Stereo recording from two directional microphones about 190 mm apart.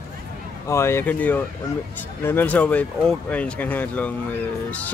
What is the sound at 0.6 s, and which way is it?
Speech, 15° left (ahead or behind).